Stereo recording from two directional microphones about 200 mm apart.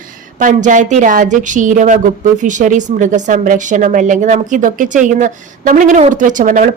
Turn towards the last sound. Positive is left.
turn(degrees=-40)  # may be behind; listen again after turning